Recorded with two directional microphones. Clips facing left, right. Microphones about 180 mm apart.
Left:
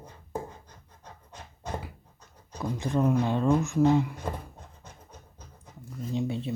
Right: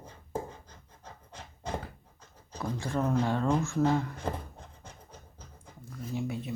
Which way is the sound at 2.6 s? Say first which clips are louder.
Left 4 dB; 20° left (ahead or behind).